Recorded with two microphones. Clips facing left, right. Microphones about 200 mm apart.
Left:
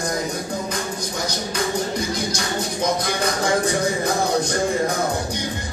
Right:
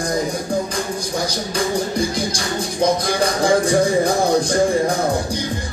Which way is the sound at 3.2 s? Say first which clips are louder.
Right 5 dB; 30° right (ahead or behind).